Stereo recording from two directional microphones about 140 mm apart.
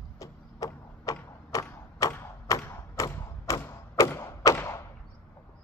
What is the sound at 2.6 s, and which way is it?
Thump, 20° left (ahead or behind).